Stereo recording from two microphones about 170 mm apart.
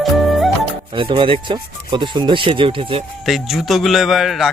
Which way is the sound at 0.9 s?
30° right (ahead or behind).